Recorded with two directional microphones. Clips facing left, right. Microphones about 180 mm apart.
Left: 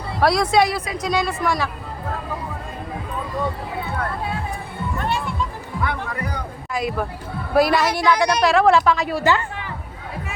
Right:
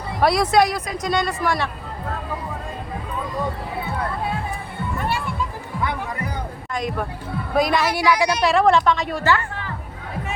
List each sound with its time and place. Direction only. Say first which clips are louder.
0.2 s a woman's voice: even; centre (ahead or behind)
6.7 s a woman's voice: left 2 dB; 5° left (ahead or behind)
9.2 s speech: even; 15° left (ahead or behind)